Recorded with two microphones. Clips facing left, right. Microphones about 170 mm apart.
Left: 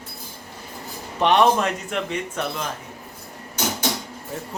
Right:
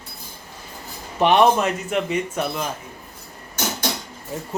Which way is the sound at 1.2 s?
5° right (ahead or behind).